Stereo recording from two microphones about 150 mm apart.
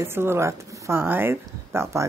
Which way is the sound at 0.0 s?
15° right (ahead or behind).